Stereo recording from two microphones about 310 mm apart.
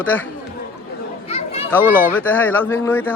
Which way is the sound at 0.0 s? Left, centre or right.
Centre.